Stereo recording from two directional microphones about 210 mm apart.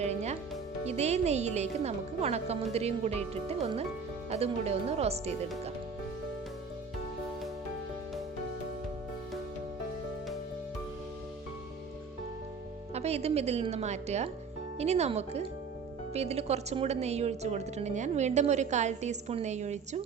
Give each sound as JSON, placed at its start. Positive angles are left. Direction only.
{"t": 0.0, "sound": "music", "side_deg": -30}
{"t": 0.9, "sound": "a woman's voice", "side_deg": -30}
{"t": 12.9, "sound": "a woman's voice", "side_deg": -30}